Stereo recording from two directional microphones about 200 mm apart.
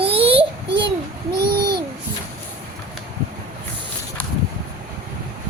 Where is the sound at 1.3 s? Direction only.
50° right (ahead or behind).